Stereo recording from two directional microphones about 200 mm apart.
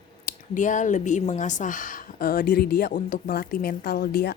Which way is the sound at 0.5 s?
40° left (ahead or behind).